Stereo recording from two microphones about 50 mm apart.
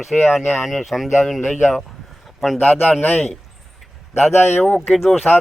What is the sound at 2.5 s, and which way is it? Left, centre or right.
Speech, left.